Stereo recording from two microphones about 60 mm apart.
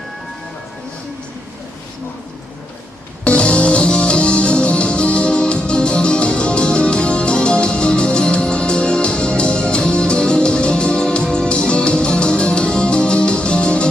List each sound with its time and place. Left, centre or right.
3.2 s music: centre